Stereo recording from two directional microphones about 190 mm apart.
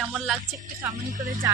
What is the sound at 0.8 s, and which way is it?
Speech, 20° right (ahead or behind).